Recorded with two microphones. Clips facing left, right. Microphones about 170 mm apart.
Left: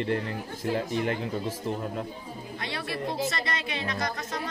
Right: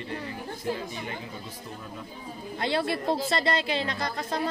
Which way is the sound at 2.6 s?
30° right (ahead or behind).